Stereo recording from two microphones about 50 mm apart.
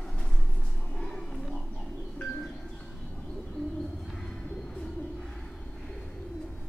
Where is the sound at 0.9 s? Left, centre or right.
Centre.